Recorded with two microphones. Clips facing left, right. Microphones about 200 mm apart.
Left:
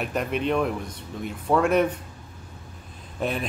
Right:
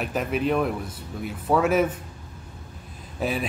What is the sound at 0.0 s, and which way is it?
Speech, centre (ahead or behind).